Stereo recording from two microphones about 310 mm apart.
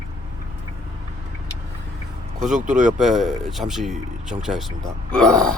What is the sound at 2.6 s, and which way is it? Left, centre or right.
Speech, right.